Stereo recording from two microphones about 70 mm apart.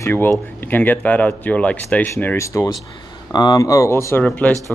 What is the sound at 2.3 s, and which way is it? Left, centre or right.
Speech, left.